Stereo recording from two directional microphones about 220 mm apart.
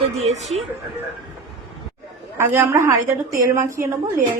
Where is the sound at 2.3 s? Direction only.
10° right (ahead or behind).